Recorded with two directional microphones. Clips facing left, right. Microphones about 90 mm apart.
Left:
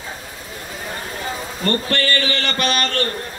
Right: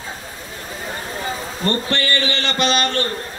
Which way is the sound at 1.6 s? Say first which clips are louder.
Left 1 dB; 20° right (ahead or behind).